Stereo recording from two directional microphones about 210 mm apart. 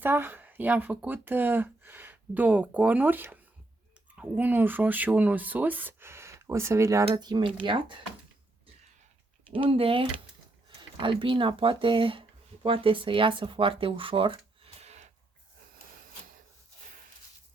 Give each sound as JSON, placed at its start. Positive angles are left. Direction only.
{"t": 0.0, "sound": "speech", "side_deg": -10}
{"t": 9.6, "sound": "speech", "side_deg": -25}